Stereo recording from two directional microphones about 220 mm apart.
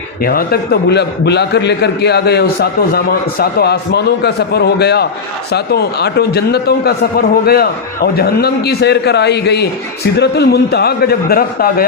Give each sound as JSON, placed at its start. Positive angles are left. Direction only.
{"t": 0.3, "sound": "a man's voice", "side_deg": 45}